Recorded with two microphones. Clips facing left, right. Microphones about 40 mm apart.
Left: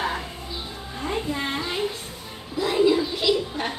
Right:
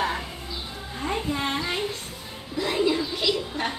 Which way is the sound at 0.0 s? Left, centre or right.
Centre.